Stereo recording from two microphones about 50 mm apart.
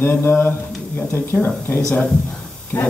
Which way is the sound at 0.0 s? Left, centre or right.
Left.